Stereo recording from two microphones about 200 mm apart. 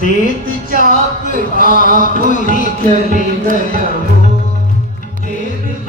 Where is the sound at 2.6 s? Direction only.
40° right (ahead or behind).